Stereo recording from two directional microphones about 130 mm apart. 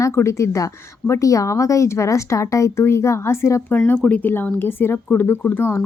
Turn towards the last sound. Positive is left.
turn(degrees=20)  # may be behind; listen again after turning